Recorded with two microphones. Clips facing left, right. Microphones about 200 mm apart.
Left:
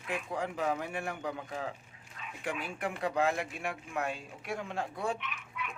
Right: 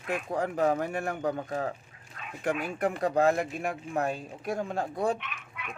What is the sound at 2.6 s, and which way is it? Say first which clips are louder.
Speech: right 4 dB; 40° right (ahead or behind).